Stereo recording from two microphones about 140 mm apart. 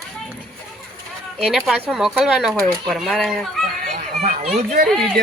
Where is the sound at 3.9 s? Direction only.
50° right (ahead or behind).